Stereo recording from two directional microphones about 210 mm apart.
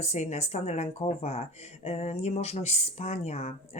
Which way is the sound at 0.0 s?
30° left (ahead or behind).